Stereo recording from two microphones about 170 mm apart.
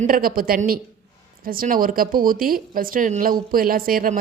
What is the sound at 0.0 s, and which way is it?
A woman's voice, 55° right (ahead or behind).